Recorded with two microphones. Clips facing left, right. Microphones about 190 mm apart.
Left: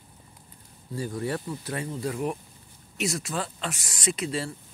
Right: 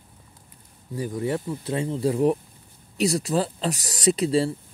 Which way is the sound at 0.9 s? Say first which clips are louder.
Right 4 dB; 20° right (ahead or behind).